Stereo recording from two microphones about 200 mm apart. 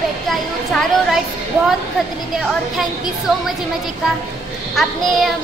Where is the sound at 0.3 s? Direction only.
Centre (ahead or behind).